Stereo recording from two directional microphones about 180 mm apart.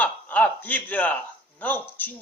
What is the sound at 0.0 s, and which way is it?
A man's voice, 10° left (ahead or behind).